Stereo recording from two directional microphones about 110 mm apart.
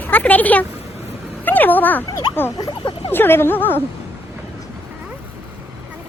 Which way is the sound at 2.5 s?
40° left (ahead or behind).